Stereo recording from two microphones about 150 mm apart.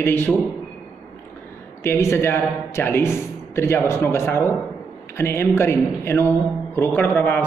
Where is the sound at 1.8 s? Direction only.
15° left (ahead or behind).